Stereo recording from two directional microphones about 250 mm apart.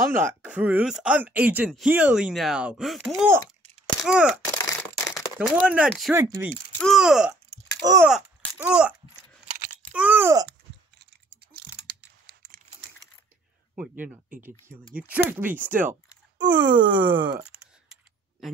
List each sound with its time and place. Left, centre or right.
0.1 s speech: centre
4.6 s a sound: centre
5.4 s speech: centre
7.8 s speech: centre
8.1 s speech: centre
9.9 s speech: centre
11.0 s typing: right
13.7 s speech: centre